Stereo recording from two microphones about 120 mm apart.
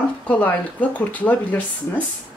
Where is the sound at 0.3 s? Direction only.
15° left (ahead or behind).